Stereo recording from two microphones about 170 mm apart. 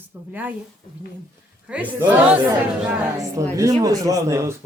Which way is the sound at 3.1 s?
20° right (ahead or behind).